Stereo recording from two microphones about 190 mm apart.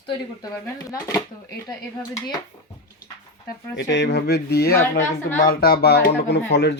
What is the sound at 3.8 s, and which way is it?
Speech, 65° left (ahead or behind).